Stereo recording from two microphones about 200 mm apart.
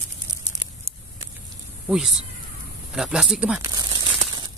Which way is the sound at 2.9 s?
5° right (ahead or behind).